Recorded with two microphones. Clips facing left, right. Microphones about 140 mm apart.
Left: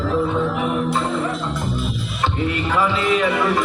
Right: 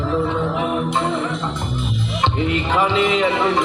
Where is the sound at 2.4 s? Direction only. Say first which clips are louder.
Even; 20° right (ahead or behind).